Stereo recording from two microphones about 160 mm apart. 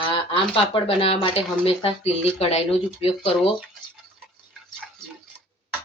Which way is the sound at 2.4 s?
40° left (ahead or behind).